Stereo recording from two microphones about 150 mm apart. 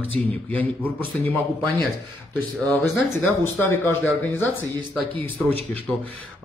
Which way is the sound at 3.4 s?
15° left (ahead or behind).